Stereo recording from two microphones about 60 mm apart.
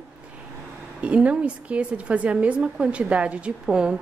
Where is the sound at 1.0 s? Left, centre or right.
Right.